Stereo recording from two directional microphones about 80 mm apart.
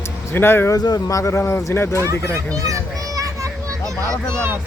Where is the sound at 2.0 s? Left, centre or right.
Right.